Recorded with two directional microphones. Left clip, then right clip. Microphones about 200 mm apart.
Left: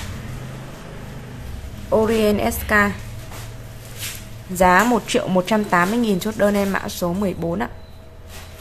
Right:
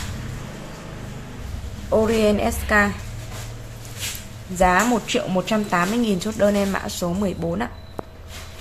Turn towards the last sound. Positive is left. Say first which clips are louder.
# left 2 dB
turn(degrees=10)  # may be behind; listen again after turning